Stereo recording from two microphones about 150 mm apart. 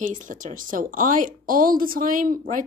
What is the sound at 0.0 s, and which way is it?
Speech, 60° right (ahead or behind).